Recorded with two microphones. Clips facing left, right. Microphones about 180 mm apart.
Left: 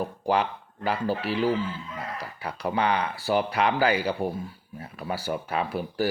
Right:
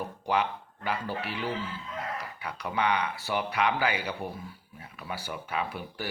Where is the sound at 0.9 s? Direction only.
35° left (ahead or behind).